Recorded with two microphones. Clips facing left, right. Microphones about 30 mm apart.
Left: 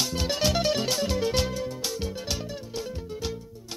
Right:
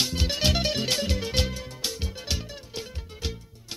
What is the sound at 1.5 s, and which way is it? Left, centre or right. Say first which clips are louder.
Music: left 7 dB; right.